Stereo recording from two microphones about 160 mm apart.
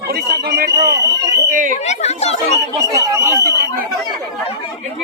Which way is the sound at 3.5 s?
90° right.